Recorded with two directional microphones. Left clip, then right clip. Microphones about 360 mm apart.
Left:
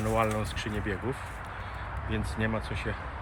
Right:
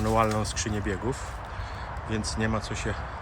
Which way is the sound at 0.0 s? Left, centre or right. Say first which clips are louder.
Right 3 dB; centre.